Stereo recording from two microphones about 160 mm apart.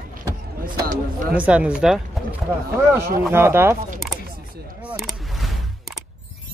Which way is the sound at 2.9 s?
15° right (ahead or behind).